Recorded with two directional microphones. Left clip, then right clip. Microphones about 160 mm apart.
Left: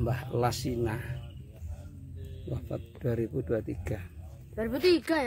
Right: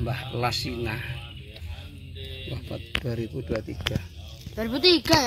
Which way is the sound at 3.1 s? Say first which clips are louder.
Even; 25° left (ahead or behind).